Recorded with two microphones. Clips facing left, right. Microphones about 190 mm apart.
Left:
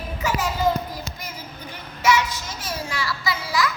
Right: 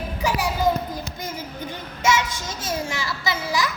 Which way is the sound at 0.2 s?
15° right (ahead or behind).